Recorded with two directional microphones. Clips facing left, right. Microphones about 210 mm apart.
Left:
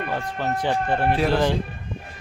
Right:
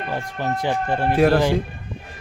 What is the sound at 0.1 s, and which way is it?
Speech, 10° right (ahead or behind).